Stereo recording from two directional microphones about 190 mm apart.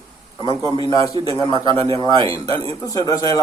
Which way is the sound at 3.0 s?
20° left (ahead or behind).